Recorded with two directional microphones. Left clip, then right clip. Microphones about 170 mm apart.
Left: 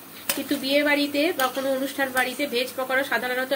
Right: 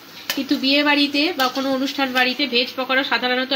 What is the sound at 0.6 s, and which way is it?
Speech, 55° right (ahead or behind).